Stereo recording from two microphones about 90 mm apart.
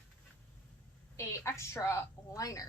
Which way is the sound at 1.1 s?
30° left (ahead or behind).